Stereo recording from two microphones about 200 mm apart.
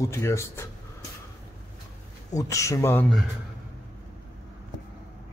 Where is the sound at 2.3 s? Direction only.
15° left (ahead or behind).